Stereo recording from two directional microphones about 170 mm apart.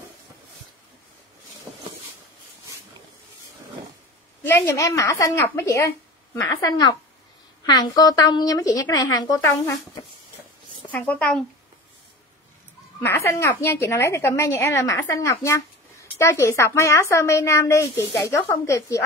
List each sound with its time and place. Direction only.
1.7 s a sound: 10° right (ahead or behind)
4.4 s a woman's voice: 15° left (ahead or behind)
10.9 s a woman's voice: 10° left (ahead or behind)
13.0 s a woman's voice: 15° left (ahead or behind)